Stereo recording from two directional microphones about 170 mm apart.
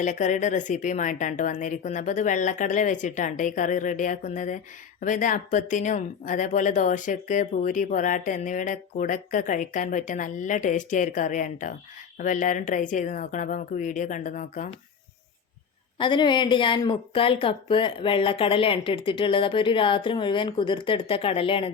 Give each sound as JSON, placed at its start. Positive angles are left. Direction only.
{"t": 0.0, "sound": "a woman's voice", "side_deg": 45}
{"t": 16.0, "sound": "speech", "side_deg": 30}